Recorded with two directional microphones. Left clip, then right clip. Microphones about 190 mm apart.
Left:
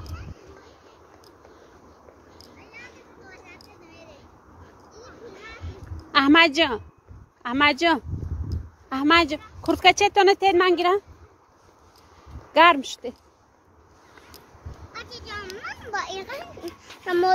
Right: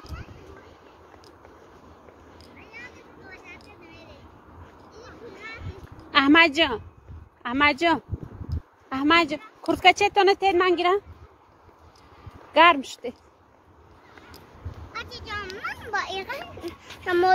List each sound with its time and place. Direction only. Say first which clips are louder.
2.3 s a sound: right 1 dB; centre (ahead or behind)
4.9 s children playing: even; centre (ahead or behind)
6.1 s a woman's voice: left 1 dB; 15° left (ahead or behind)
12.5 s speech: left 1 dB; 15° left (ahead or behind)
14.9 s children playing: right 2 dB; 5° left (ahead or behind)